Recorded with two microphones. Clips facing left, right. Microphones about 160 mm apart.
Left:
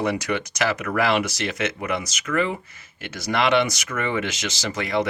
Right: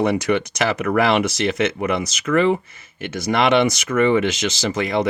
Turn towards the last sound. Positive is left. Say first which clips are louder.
# right 4 dB
turn(degrees=-20)  # may be behind; listen again after turning